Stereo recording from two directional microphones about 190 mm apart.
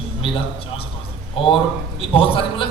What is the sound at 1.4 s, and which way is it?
A man's voice, 30° left (ahead or behind).